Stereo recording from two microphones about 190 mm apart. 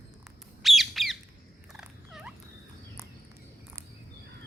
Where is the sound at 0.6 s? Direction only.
Centre (ahead or behind).